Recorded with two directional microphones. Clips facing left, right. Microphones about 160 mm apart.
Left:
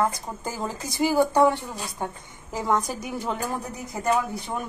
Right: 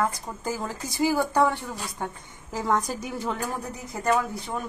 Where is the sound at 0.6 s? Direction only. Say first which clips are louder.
Left 1 dB; 20° left (ahead or behind).